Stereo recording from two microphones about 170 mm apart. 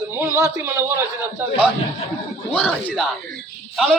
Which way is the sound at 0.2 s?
15° right (ahead or behind).